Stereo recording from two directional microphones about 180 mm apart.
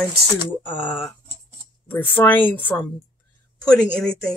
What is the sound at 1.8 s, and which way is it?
Speech, 10° left (ahead or behind).